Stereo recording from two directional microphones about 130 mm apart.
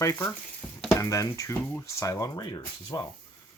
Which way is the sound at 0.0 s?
25° left (ahead or behind).